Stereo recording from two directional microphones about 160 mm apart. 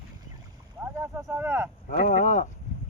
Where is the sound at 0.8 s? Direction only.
15° right (ahead or behind).